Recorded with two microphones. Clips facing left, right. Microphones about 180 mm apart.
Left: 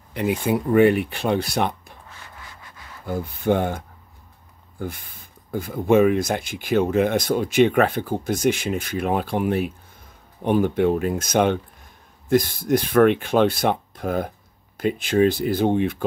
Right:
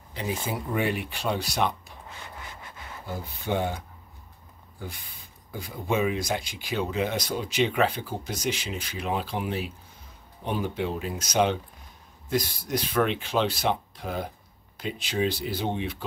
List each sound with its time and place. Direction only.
0.1 s speech: 60° left (ahead or behind)
3.2 s speech: 50° left (ahead or behind)